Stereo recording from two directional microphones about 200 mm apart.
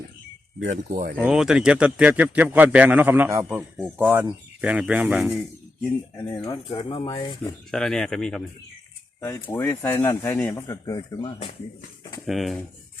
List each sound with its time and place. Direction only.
0.7 s speech: 40° right (ahead or behind)
1.1 s a man's voice: 5° right (ahead or behind)
6.4 s speech: 20° left (ahead or behind)
7.7 s speech: centre (ahead or behind)
9.2 s a man's voice: 15° left (ahead or behind)
12.2 s speech: centre (ahead or behind)